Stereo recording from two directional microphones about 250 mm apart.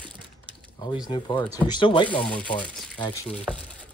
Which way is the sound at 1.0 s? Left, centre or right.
Centre.